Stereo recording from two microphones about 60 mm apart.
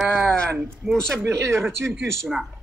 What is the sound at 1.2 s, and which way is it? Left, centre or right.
Speech, right.